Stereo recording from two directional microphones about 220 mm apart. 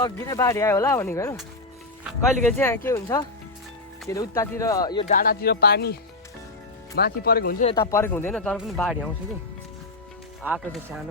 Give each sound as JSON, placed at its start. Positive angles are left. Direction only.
{"t": 0.0, "sound": "speech", "side_deg": 15}
{"t": 2.0, "sound": "speech", "side_deg": 0}
{"t": 2.6, "sound": "speech", "side_deg": 10}
{"t": 5.0, "sound": "speech", "side_deg": 40}
{"t": 7.8, "sound": "speech", "side_deg": 15}
{"t": 10.4, "sound": "speech", "side_deg": -5}